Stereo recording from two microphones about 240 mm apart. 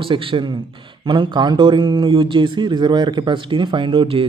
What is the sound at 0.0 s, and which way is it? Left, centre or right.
A man's voice, right.